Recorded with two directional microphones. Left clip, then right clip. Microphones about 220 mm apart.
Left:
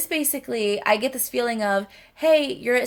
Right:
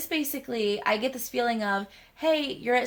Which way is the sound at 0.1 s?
40° left (ahead or behind).